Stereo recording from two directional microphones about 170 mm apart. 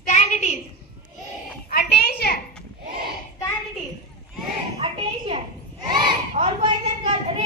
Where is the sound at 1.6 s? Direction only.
65° left (ahead or behind).